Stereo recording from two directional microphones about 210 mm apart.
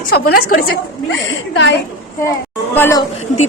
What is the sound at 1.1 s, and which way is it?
Speech, 65° left (ahead or behind).